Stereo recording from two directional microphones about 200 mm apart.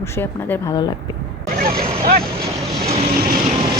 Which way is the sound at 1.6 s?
45° right (ahead or behind).